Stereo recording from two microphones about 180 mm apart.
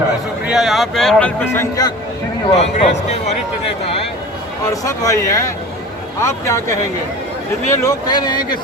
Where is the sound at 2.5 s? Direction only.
35° left (ahead or behind).